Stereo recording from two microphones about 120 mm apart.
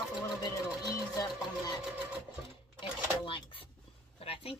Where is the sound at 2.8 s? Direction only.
45° left (ahead or behind).